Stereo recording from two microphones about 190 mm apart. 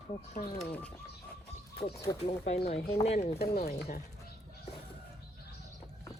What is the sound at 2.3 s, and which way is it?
Speech, 35° left (ahead or behind).